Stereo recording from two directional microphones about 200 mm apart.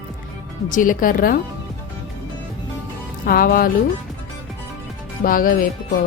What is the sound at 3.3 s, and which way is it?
Speech, 45° left (ahead or behind).